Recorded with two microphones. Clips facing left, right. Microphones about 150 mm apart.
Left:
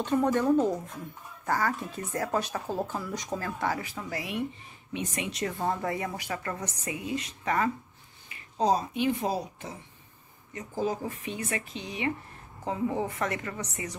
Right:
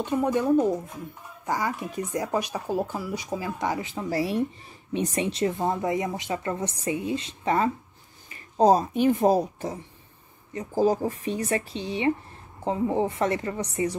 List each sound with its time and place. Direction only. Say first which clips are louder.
0.0 s speech: right 1 dB; 10° right (ahead or behind); by 7.7 s 25° right (ahead or behind)
8.3 s speech: right 7 dB; 40° right (ahead or behind)